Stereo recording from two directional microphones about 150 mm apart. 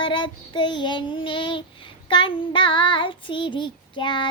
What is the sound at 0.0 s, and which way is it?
Child singing, 30° left (ahead or behind).